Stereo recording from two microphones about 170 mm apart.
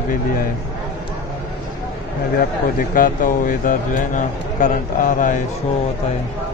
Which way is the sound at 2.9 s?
55° left (ahead or behind).